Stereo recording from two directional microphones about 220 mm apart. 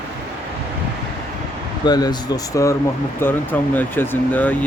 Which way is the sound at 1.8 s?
20° left (ahead or behind).